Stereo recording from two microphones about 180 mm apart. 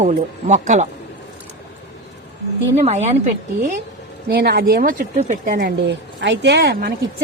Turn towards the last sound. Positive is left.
turn(degrees=-60)  # may be behind; listen again after turning